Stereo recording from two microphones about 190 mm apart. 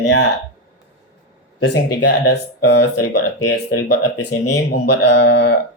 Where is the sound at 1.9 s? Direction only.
70° left (ahead or behind).